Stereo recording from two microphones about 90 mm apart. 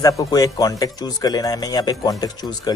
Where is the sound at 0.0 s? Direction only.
45° left (ahead or behind).